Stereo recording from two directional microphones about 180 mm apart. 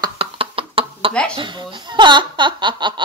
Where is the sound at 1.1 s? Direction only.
5° left (ahead or behind).